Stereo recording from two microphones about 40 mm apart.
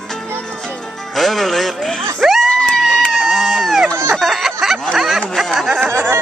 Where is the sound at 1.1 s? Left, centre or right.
Centre.